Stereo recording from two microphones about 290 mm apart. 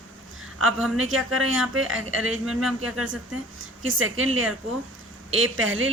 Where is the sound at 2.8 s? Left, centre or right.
Right.